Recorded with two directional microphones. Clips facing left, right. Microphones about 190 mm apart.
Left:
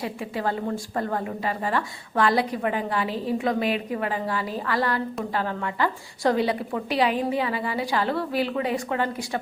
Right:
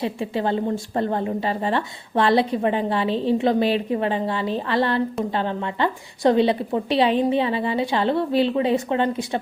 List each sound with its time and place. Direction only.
0.0 s a woman's voice: 25° right (ahead or behind)